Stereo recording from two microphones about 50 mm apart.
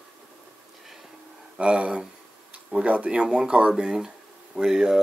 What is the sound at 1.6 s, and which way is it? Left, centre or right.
Speech, right.